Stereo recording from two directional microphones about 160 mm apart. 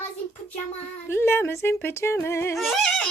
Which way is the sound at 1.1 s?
15° left (ahead or behind).